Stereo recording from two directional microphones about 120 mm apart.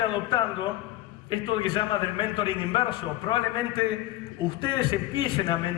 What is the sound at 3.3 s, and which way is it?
Speech, 35° left (ahead or behind).